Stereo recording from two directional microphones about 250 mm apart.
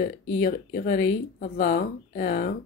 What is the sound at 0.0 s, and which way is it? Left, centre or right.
Speech, left.